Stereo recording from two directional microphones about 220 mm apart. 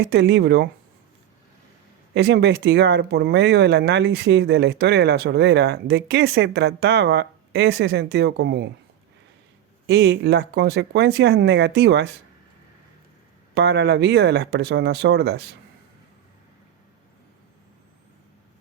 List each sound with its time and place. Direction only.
0.0 s speech: 50° right (ahead or behind)
2.1 s speech: 50° right (ahead or behind)
9.8 s speech: 50° right (ahead or behind)
13.5 s speech: 50° right (ahead or behind)